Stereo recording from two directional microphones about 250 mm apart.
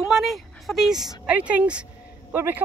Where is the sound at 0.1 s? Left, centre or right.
Centre.